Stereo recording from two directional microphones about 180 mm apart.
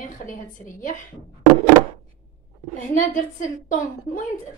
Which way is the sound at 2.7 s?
45° left (ahead or behind).